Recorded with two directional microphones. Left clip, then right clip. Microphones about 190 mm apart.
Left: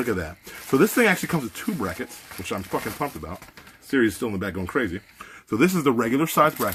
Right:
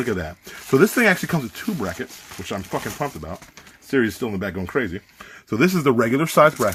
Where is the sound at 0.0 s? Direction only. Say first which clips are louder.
Right 1 dB; 35° right (ahead or behind).